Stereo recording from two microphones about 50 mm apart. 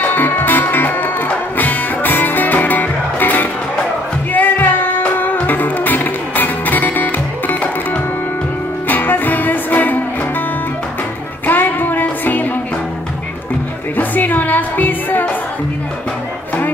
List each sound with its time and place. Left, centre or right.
0.0 s music: left
11.4 s music: left
13.9 s music: left